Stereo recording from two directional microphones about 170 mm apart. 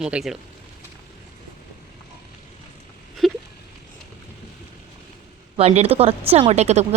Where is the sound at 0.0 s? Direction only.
5° right (ahead or behind).